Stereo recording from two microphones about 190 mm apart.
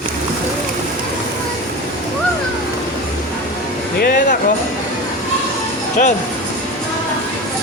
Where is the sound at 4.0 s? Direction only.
50° left (ahead or behind).